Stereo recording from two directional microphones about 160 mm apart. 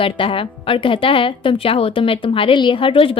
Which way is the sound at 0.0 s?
35° left (ahead or behind).